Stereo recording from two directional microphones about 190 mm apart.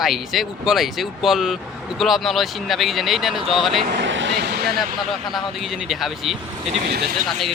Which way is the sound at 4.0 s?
75° right (ahead or behind).